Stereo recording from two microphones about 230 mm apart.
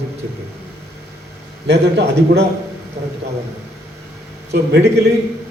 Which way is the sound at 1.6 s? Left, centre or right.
Right.